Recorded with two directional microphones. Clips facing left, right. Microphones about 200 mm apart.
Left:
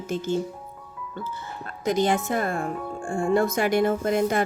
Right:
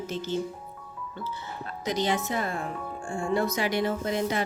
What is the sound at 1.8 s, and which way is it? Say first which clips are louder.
Speech: left 5 dB; 50° left (ahead or behind).